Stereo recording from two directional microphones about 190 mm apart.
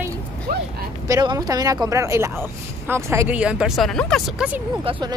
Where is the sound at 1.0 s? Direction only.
20° right (ahead or behind); by 4.5 s centre (ahead or behind).